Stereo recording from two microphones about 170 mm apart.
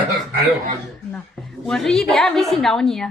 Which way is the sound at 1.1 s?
Centre (ahead or behind).